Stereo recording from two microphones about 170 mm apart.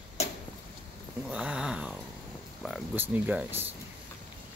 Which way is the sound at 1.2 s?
5° right (ahead or behind).